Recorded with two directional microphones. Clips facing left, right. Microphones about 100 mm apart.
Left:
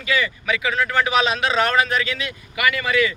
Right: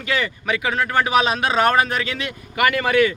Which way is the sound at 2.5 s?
45° right (ahead or behind).